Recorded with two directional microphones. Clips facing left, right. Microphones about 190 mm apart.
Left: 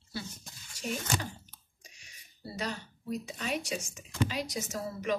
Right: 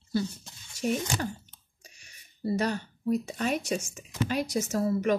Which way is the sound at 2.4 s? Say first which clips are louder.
Right 9 dB; 50° right (ahead or behind).